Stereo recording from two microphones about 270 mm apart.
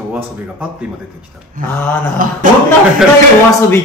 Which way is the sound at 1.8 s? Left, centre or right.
Centre.